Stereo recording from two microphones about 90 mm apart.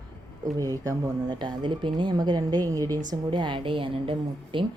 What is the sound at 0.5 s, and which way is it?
Speech, 40° right (ahead or behind).